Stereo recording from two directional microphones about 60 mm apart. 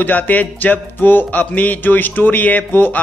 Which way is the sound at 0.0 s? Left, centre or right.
Left.